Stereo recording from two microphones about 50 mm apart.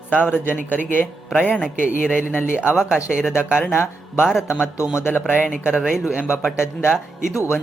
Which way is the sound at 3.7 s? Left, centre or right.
Left.